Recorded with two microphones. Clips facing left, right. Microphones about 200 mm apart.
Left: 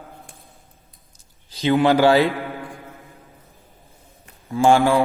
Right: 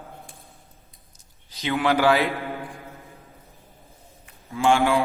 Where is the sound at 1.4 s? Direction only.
30° left (ahead or behind).